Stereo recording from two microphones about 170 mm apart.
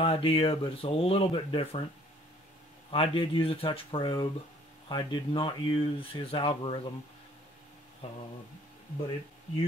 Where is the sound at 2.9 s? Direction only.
30° left (ahead or behind).